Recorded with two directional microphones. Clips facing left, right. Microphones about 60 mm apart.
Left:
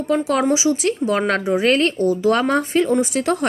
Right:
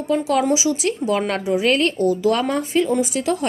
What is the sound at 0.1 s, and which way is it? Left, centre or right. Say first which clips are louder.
Speech: even; left.